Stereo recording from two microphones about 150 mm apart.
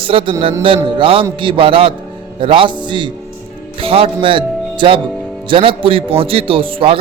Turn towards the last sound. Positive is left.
turn(degrees=-35)  # may be behind; listen again after turning